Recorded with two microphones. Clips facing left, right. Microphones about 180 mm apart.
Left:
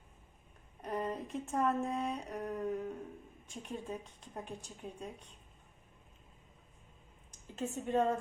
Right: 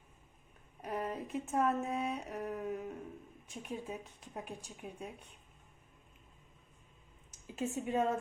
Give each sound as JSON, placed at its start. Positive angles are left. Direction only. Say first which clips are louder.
{"t": 0.8, "sound": "speech", "louder": "left 1 dB", "side_deg": -5}
{"t": 7.3, "sound": "speech", "louder": "right 1 dB", "side_deg": -10}